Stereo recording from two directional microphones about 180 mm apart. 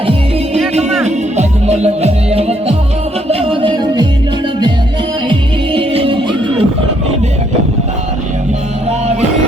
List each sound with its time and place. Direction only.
1.0 s music: 35° right (ahead or behind)
5.3 s music: 30° right (ahead or behind)